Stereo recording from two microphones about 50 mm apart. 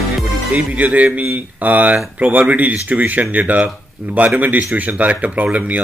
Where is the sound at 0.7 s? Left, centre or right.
Right.